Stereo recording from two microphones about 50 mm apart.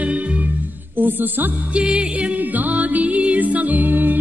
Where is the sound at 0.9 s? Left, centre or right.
Right.